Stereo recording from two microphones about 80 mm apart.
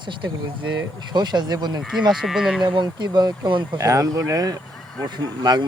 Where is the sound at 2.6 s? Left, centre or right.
Right.